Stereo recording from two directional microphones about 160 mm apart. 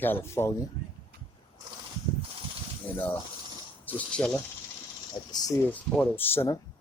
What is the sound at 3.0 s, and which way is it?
Speech, 10° left (ahead or behind).